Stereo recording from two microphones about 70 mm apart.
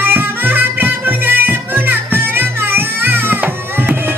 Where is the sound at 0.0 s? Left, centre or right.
Right.